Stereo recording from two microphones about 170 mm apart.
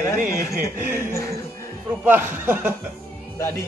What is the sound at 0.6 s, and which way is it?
Speech, 10° right (ahead or behind).